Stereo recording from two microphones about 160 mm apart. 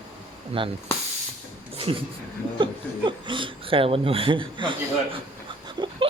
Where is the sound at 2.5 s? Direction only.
30° right (ahead or behind).